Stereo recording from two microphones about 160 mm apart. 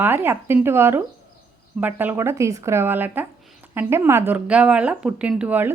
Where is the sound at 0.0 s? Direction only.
15° right (ahead or behind).